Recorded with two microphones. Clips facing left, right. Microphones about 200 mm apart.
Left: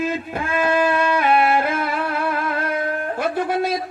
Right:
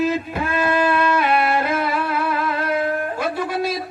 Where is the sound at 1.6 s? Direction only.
50° left (ahead or behind).